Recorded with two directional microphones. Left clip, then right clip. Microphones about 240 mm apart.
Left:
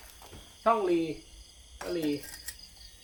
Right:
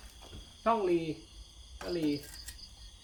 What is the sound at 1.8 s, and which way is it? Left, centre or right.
Cricket, centre.